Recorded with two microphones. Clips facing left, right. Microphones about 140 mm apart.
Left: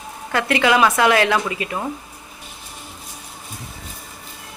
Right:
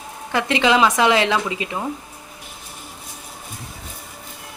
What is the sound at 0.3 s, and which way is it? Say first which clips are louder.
A woman's voice: even; 20° right (ahead or behind).